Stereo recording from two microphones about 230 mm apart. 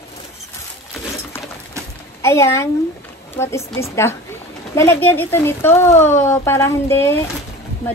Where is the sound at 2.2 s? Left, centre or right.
Centre.